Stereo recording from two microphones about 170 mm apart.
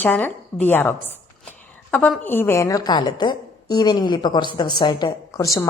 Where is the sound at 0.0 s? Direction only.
10° left (ahead or behind).